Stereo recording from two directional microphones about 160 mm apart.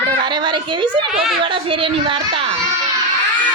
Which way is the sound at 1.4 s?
35° right (ahead or behind).